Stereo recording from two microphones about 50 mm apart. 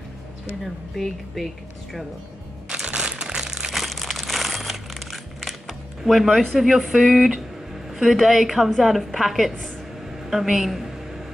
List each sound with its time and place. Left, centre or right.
0.9 s a woman's voice: centre
2.7 s crumpling: centre
3.7 s crumpling: centre
7.9 s a woman's voice: centre
10.2 s a sound: centre